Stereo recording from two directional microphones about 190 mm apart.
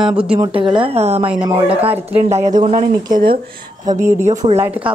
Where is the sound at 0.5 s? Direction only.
25° right (ahead or behind).